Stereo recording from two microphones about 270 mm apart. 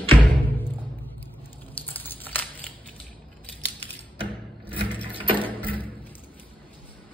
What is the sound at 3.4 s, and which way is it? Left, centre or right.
Scissors, centre.